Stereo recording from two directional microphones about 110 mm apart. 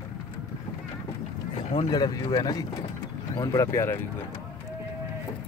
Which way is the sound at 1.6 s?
65° left (ahead or behind).